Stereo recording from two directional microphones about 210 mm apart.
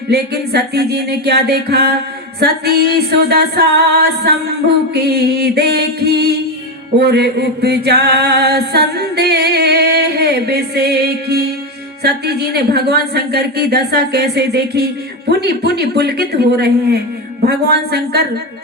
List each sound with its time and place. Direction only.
0.1 s music: 50° right (ahead or behind)